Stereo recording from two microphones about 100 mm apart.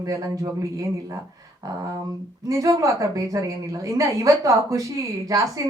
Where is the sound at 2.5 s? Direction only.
35° right (ahead or behind).